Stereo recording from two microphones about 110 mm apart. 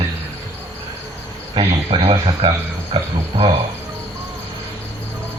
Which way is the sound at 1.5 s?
50° right (ahead or behind).